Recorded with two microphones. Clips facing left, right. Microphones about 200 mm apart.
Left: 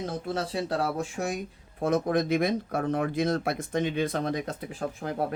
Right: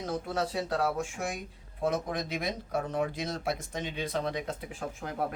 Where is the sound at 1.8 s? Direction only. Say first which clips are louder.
Left 6 dB; 50° left (ahead or behind).